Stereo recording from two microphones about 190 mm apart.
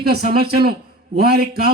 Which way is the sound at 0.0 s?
55° right (ahead or behind).